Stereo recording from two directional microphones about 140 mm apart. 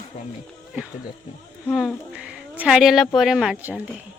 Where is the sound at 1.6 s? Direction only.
5° left (ahead or behind).